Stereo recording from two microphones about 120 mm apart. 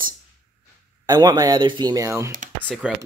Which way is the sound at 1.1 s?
30° right (ahead or behind).